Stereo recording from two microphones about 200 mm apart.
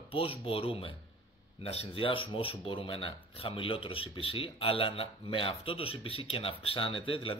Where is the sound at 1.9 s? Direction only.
25° left (ahead or behind).